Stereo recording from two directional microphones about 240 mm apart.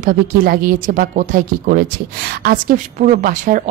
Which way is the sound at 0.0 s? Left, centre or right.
Right.